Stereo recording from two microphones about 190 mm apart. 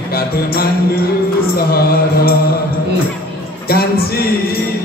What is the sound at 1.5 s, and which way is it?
Speech, 50° left (ahead or behind).